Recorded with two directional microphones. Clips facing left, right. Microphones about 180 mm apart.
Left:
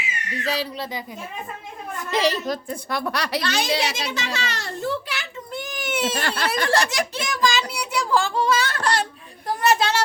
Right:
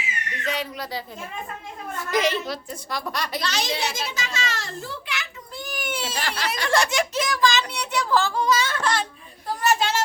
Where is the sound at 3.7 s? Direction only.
75° left (ahead or behind).